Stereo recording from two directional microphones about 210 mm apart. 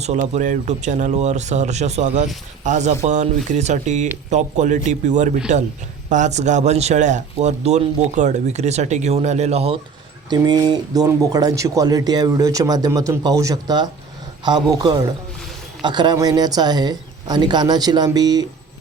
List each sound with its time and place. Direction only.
0.0 s a man's voice: 35° right (ahead or behind)
10.2 s speech: 20° right (ahead or behind)